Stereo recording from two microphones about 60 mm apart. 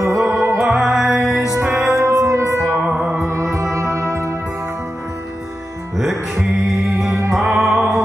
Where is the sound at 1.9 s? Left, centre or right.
Right.